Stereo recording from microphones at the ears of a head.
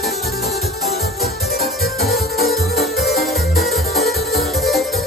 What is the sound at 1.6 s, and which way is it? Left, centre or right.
Music, centre.